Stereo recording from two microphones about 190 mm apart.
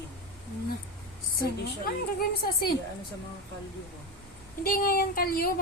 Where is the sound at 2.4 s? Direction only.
55° left (ahead or behind).